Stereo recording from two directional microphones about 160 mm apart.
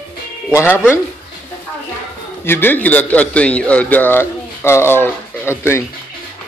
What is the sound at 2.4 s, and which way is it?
A man's voice, 15° left (ahead or behind).